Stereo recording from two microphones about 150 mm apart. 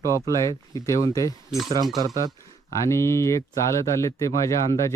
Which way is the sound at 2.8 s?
20° left (ahead or behind).